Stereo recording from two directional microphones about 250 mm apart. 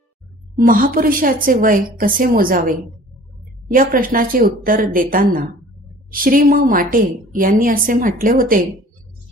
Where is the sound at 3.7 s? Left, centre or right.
Right.